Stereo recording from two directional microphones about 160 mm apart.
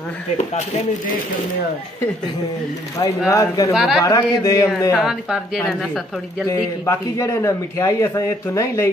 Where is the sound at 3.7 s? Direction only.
Centre (ahead or behind).